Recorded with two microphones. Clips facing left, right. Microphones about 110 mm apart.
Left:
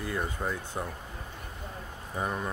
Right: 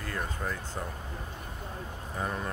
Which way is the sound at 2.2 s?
10° left (ahead or behind).